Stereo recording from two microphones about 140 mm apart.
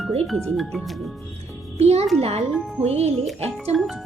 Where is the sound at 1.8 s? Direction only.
50° right (ahead or behind).